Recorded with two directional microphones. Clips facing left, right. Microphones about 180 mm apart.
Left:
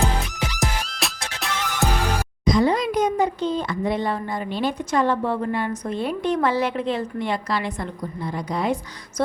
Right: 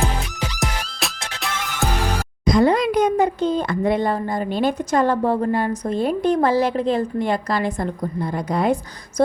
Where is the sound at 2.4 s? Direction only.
55° right (ahead or behind).